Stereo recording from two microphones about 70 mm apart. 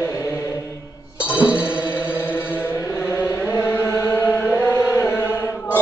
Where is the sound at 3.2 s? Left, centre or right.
Left.